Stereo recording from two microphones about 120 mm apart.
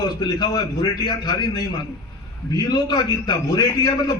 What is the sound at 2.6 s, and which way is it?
A man's voice, 35° left (ahead or behind).